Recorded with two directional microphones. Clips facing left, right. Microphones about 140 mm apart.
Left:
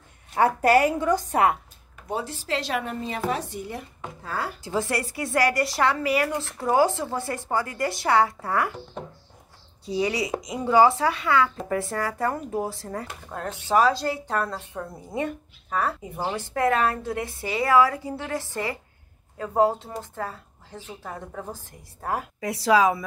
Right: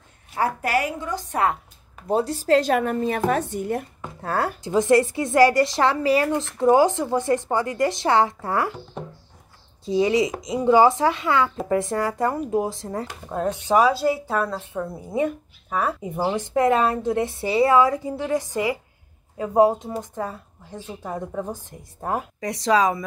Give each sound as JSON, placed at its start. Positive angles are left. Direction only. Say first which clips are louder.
{"t": 0.6, "sound": "a woman's voice", "louder": "left 5 dB", "side_deg": 45}
{"t": 2.0, "sound": "a woman's voice", "louder": "right 9 dB", "side_deg": -35}
{"t": 4.6, "sound": "speech", "louder": "right 11 dB", "side_deg": -20}
{"t": 9.8, "sound": "a woman's voice", "louder": "right 6 dB", "side_deg": -25}
{"t": 22.4, "sound": "speech", "louder": "even", "side_deg": 5}